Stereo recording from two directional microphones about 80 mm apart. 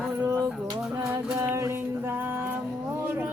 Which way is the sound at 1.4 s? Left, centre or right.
Right.